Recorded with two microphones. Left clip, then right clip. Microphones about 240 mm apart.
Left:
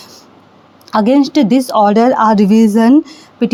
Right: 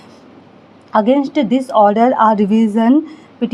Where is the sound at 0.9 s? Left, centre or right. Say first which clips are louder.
Left 2 dB; left.